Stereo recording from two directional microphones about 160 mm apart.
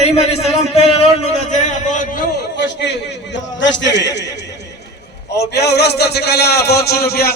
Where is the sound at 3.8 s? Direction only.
90° left.